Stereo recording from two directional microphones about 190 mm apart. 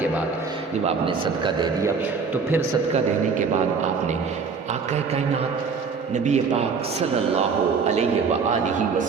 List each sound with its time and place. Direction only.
1.0 s a man's voice: 25° right (ahead or behind)
6.2 s a man's voice: 40° right (ahead or behind)